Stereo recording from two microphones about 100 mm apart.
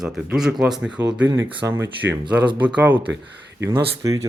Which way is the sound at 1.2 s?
30° right (ahead or behind).